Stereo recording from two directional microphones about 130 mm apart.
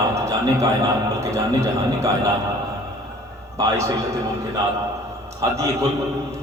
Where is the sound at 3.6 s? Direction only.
25° right (ahead or behind).